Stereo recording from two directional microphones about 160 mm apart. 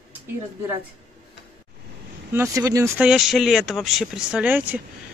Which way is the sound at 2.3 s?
20° right (ahead or behind).